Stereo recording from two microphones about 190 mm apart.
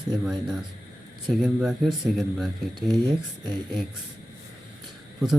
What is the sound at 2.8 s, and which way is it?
Speech, 20° right (ahead or behind).